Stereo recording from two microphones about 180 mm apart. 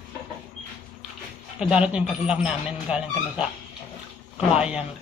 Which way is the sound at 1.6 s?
5° right (ahead or behind).